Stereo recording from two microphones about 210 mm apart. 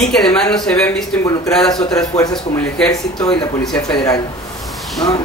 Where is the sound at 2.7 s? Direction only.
5° left (ahead or behind).